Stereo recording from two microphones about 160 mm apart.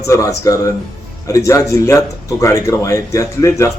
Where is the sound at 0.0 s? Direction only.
20° left (ahead or behind).